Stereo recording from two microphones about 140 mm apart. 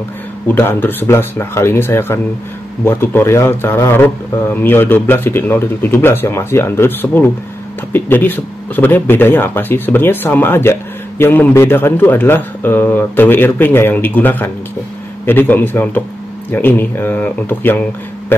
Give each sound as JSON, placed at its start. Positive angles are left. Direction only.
{"t": 0.5, "sound": "speech", "side_deg": 15}